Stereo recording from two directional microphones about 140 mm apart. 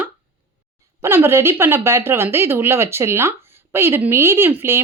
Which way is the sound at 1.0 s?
15° right (ahead or behind).